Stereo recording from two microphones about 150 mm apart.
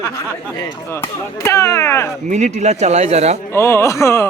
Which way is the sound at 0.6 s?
15° left (ahead or behind).